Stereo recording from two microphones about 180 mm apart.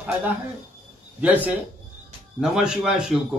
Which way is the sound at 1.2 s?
10° right (ahead or behind).